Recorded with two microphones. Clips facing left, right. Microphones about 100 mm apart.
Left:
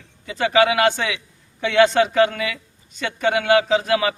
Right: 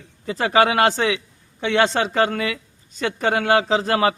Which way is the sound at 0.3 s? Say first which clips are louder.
Even; 35° right (ahead or behind).